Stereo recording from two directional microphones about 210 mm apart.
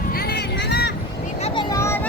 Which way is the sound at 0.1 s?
45° left (ahead or behind).